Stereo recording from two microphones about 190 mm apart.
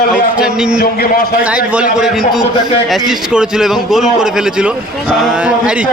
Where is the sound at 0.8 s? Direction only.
55° left (ahead or behind).